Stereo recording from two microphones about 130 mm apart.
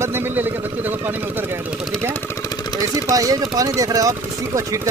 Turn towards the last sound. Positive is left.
turn(degrees=-25)  # may be behind; listen again after turning